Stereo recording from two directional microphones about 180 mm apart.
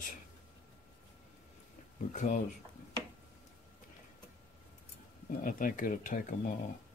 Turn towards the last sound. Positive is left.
turn(degrees=45)  # may be behind; listen again after turning